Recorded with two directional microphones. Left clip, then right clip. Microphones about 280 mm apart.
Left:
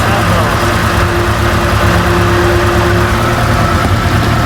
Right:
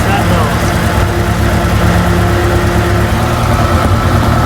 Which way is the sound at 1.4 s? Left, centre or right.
Centre.